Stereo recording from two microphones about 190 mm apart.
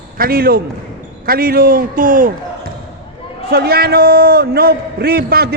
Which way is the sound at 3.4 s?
55° right (ahead or behind).